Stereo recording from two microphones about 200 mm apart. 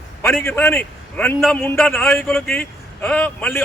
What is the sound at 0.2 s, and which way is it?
A man's voice, 10° left (ahead or behind).